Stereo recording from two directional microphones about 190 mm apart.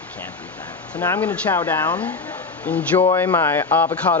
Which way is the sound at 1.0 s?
10° left (ahead or behind).